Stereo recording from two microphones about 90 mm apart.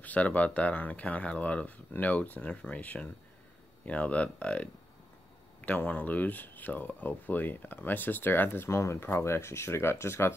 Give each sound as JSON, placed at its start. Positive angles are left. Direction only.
{"t": 0.0, "sound": "speech", "side_deg": 15}
{"t": 5.7, "sound": "speech", "side_deg": 15}